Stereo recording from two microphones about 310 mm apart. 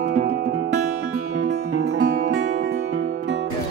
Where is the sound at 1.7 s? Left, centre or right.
Right.